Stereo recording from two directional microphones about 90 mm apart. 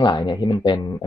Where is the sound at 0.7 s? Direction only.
45° left (ahead or behind).